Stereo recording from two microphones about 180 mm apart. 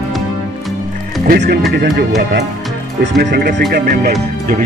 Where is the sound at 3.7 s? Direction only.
55° right (ahead or behind).